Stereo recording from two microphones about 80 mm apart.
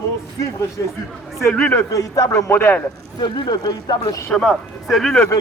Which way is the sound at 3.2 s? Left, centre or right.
Left.